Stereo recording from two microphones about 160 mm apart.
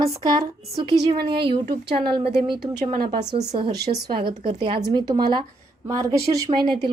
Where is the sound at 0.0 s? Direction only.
20° right (ahead or behind).